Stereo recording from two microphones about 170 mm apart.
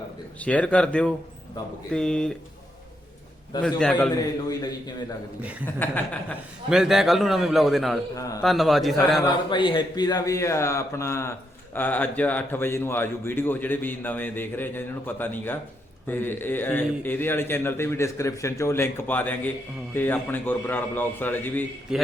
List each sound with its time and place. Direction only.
0.3 s a man's voice: 10° left (ahead or behind)
3.6 s a man's voice: 5° left (ahead or behind)
4.1 s a man's voice: 20° left (ahead or behind)
5.4 s a man's voice: 10° right (ahead or behind)
5.8 s a man's voice: 10° left (ahead or behind)
6.7 s a man's voice: centre (ahead or behind)
8.1 s a man's voice: 20° left (ahead or behind)
8.4 s a man's voice: centre (ahead or behind)
9.2 s a man's voice: 25° left (ahead or behind); by 21.6 s 10° left (ahead or behind)
21.9 s a man's voice: 5° right (ahead or behind)